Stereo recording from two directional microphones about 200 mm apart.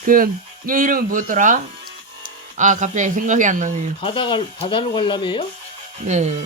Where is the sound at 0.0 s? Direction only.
45° right (ahead or behind).